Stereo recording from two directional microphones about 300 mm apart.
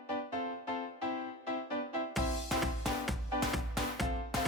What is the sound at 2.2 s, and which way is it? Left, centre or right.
Music, centre.